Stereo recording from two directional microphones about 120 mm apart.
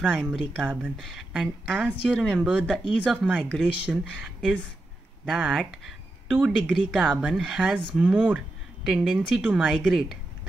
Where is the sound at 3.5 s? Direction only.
Centre (ahead or behind).